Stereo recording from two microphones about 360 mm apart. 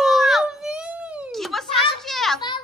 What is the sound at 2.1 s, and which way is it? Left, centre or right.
Children playing, centre.